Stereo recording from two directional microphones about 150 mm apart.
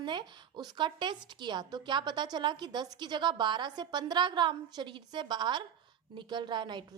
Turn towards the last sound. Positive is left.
turn(degrees=-30)  # may be behind; listen again after turning